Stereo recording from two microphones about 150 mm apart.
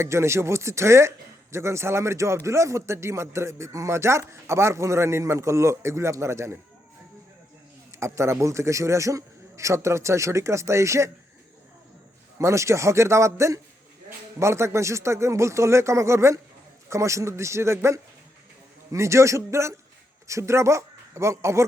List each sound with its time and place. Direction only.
0.0 s speech: 15° right (ahead or behind)
7.9 s a man's voice: 20° right (ahead or behind)
12.4 s a man's voice: 20° right (ahead or behind)